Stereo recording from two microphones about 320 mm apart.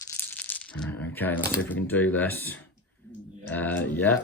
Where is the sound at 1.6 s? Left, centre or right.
Centre.